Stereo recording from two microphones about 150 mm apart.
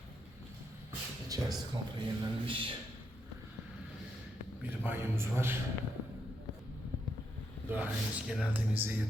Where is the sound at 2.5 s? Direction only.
35° right (ahead or behind).